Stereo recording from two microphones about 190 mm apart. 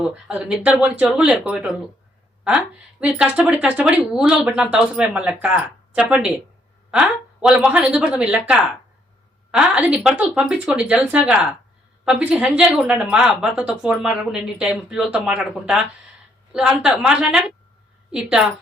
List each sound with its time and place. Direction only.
0.0 s speech: 5° right (ahead or behind)